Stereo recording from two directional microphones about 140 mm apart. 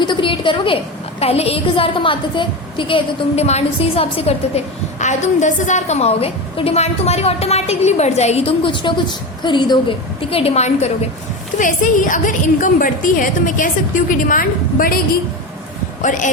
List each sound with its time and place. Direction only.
0.0 s a woman's voice: 35° left (ahead or behind)
10.2 s a woman's voice: 45° left (ahead or behind)
11.5 s a woman's voice: 65° left (ahead or behind); by 14.9 s 90° left
16.0 s speech: 65° left (ahead or behind)